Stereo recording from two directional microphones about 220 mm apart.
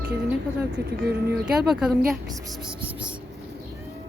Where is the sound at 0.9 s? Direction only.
45° right (ahead or behind).